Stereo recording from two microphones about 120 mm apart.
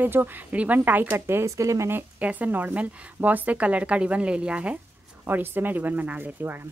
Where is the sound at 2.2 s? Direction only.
15° right (ahead or behind).